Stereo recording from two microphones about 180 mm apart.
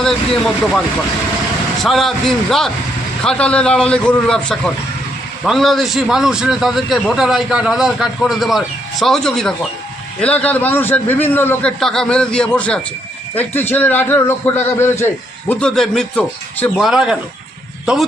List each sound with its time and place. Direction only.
0.0 s a man's voice: centre (ahead or behind)
1.8 s a man's voice: centre (ahead or behind)